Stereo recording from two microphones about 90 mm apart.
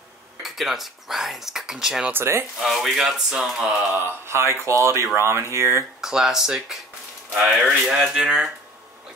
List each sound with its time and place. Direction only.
0.4 s speech: centre (ahead or behind)
2.0 s speech: 25° right (ahead or behind)
2.6 s speech: 5° right (ahead or behind)
4.0 s speech: 30° right (ahead or behind)
5.9 s speech: 5° right (ahead or behind)